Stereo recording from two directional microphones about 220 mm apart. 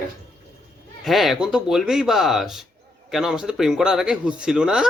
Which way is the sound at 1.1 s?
Centre (ahead or behind).